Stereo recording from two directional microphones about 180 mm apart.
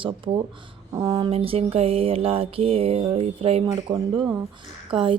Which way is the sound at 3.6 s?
20° right (ahead or behind).